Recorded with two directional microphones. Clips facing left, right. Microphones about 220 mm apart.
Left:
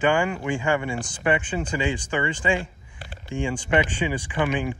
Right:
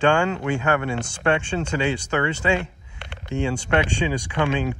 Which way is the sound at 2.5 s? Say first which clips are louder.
Right 2 dB; 70° right (ahead or behind).